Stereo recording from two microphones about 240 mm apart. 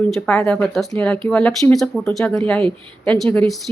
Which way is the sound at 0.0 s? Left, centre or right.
Centre.